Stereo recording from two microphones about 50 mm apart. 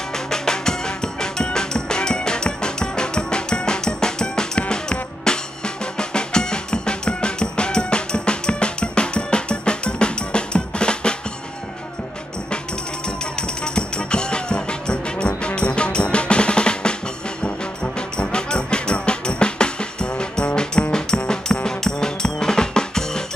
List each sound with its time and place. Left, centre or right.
0.1 s music: centre
13.2 s music: centre
17.9 s music: centre